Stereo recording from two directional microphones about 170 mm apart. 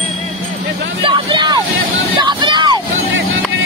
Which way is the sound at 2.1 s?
25° right (ahead or behind).